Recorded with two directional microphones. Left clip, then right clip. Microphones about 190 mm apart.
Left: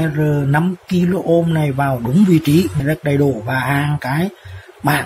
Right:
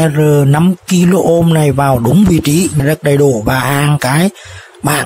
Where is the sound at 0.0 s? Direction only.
40° right (ahead or behind).